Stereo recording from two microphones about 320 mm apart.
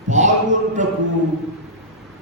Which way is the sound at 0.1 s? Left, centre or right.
Right.